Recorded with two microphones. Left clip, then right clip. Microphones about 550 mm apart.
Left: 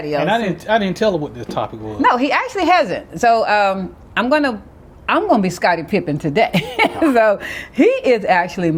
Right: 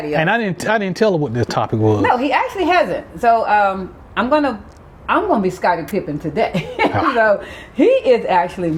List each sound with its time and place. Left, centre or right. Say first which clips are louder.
0.2 s speech: right 1 dB; right
2.0 s speech: left 5 dB; left